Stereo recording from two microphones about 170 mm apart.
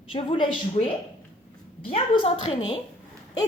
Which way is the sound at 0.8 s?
45° left (ahead or behind).